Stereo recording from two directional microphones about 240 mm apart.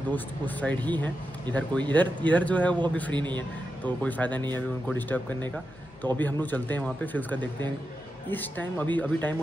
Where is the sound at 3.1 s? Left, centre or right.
Centre.